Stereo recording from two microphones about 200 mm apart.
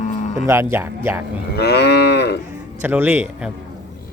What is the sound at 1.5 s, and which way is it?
Moo, 55° left (ahead or behind).